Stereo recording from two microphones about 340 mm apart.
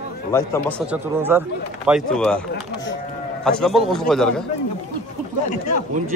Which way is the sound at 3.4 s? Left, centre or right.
Centre.